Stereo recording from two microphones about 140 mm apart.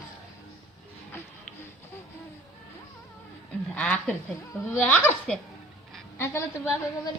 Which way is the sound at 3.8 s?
10° left (ahead or behind).